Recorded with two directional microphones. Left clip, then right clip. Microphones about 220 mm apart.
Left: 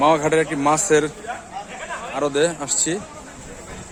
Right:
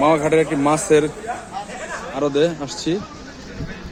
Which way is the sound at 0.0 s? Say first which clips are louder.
Right 1 dB; 20° left (ahead or behind).